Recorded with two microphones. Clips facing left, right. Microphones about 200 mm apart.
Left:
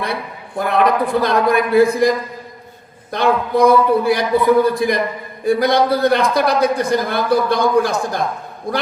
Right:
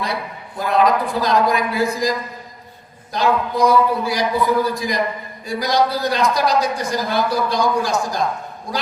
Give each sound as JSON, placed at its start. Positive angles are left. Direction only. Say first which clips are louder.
{"t": 0.6, "sound": "a man's voice", "louder": "left 1 dB", "side_deg": 55}